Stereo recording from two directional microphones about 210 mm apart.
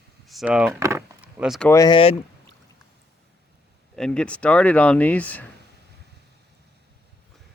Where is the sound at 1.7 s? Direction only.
20° left (ahead or behind).